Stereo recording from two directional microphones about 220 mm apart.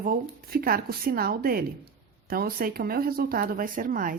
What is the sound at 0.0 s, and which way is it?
A woman's voice, 40° right (ahead or behind).